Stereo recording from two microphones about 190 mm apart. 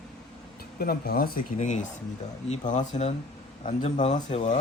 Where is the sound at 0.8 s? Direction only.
55° left (ahead or behind).